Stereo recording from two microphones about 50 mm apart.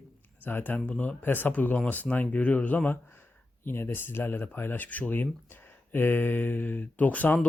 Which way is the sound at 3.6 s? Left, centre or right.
Left.